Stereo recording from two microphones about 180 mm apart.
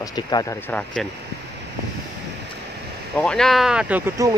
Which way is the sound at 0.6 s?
5° left (ahead or behind).